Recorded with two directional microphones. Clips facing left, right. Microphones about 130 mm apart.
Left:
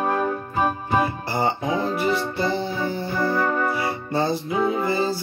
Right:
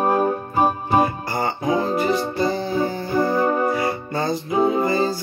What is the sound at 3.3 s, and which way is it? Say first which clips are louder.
Music: right 2 dB; 20° right (ahead or behind).